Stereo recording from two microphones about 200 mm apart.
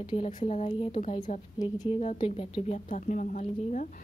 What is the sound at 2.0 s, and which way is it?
Speech, 35° left (ahead or behind).